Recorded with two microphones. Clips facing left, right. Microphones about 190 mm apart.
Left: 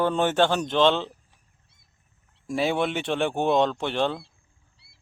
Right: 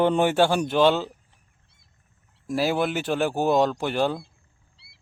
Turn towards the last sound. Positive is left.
turn(degrees=-5)  # may be behind; listen again after turning